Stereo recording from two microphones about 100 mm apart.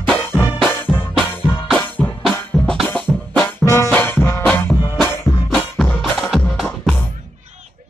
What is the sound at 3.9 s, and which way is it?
Music, 20° left (ahead or behind).